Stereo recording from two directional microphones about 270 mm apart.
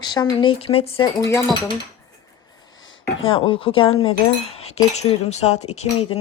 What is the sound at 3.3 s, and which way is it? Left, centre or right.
Speech, centre.